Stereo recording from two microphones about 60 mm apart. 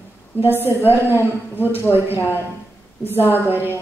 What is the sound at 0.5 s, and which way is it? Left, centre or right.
A woman's voice, right.